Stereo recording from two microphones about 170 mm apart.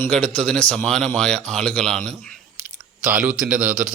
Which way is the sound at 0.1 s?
5° left (ahead or behind).